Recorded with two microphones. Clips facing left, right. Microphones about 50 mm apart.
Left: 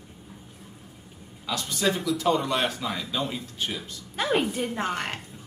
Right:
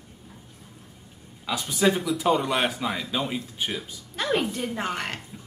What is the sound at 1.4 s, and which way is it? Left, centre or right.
Speech, centre.